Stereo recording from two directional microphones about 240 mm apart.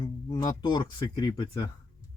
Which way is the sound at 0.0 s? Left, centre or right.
Centre.